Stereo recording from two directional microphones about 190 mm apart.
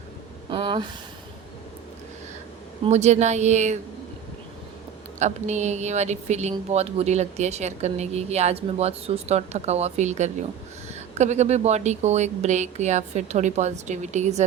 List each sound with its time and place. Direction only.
0.5 s speech: 25° right (ahead or behind)
2.8 s a woman's voice: 35° right (ahead or behind)
5.2 s a woman's voice: 35° right (ahead or behind)